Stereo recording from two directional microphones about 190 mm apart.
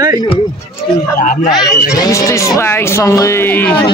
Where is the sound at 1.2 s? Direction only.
45° left (ahead or behind).